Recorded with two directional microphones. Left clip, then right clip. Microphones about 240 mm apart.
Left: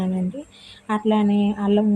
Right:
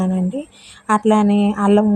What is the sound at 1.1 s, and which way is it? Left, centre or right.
Speech, right.